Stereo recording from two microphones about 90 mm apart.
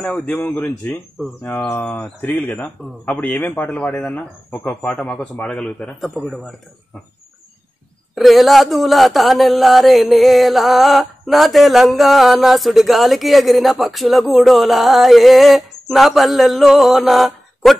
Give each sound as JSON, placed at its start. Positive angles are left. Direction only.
{"t": 0.0, "sound": "speech", "side_deg": 15}
{"t": 6.2, "sound": "speech", "side_deg": 0}
{"t": 8.1, "sound": "speech", "side_deg": 0}